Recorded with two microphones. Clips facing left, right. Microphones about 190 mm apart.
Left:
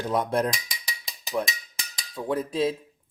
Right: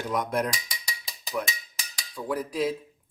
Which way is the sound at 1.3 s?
30° left (ahead or behind).